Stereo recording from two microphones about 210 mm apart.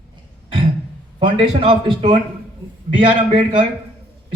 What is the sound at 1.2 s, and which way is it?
A man's voice, 25° right (ahead or behind).